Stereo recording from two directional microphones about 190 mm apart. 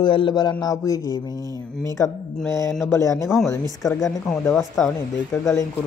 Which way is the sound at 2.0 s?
5° left (ahead or behind).